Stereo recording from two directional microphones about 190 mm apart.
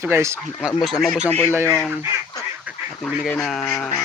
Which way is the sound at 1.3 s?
10° left (ahead or behind).